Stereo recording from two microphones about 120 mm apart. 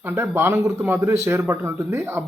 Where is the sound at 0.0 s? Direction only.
20° right (ahead or behind).